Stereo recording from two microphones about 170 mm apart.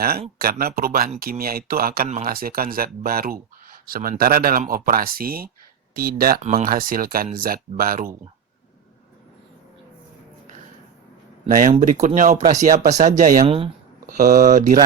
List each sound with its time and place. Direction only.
0.3 s speech: 60° right (ahead or behind)
6.4 s speech: 35° right (ahead or behind)
6.7 s speech: 55° right (ahead or behind)
11.4 s speech: 50° right (ahead or behind)